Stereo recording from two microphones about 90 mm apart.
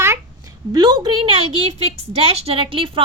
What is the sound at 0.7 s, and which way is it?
Speech, 60° right (ahead or behind).